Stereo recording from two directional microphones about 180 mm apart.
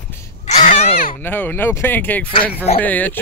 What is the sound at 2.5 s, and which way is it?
Speech, 35° left (ahead or behind).